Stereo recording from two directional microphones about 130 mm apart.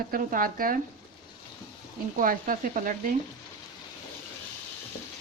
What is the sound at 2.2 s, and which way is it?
Speech, 90° right.